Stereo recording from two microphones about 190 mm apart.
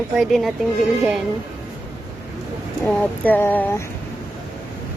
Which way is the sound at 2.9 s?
10° left (ahead or behind).